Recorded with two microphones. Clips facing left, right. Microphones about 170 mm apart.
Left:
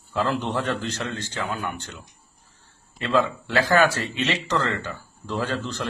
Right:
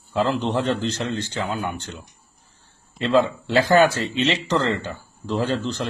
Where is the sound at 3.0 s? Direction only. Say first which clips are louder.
Right 4 dB; 25° right (ahead or behind).